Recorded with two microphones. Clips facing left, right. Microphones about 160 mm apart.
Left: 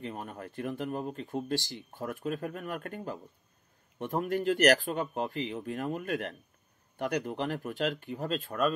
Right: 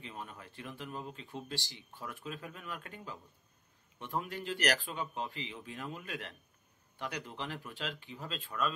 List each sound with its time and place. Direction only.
0.0 s speech: 50° left (ahead or behind)